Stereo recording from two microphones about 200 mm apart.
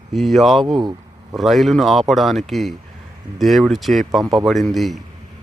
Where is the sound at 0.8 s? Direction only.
20° right (ahead or behind).